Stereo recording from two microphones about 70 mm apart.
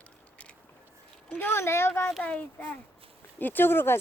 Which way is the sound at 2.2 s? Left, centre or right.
Left.